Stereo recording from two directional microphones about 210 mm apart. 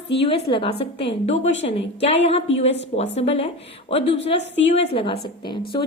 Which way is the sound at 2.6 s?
60° left (ahead or behind).